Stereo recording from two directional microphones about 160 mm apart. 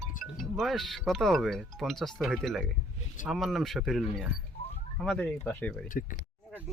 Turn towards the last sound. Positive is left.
turn(degrees=60)  # may be behind; listen again after turning